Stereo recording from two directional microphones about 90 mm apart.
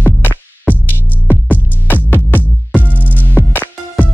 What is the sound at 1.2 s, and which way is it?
Music, 20° left (ahead or behind).